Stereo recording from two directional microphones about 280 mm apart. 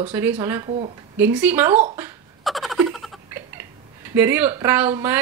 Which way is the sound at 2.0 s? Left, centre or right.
Centre.